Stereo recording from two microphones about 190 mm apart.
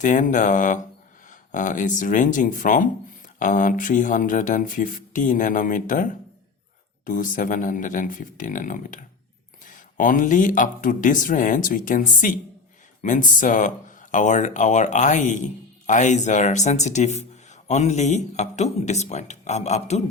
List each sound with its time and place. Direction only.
0.0 s speech: 40° left (ahead or behind)